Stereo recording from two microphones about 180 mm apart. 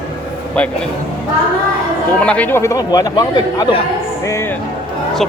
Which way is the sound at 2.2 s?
10° left (ahead or behind).